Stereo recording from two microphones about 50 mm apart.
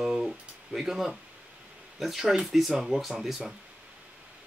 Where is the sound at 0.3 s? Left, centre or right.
Centre.